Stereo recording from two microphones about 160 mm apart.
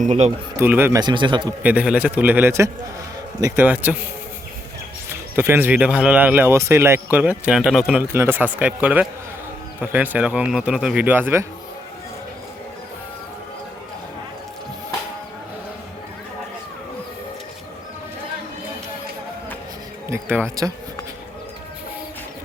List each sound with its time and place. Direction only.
0.0 s speech: 45° right (ahead or behind)
0.5 s speech: 15° right (ahead or behind)
0.9 s speech: 30° right (ahead or behind)
1.6 s speech: 10° right (ahead or behind)
5.0 s speech: 15° right (ahead or behind)
20.1 s speech: 15° right (ahead or behind)